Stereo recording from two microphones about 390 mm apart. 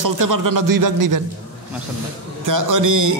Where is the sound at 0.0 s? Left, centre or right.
Right.